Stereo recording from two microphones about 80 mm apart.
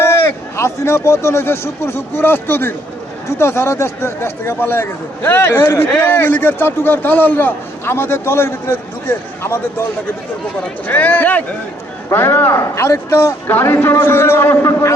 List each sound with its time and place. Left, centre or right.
0.0 s a man's voice: left
10.8 s a man's voice: left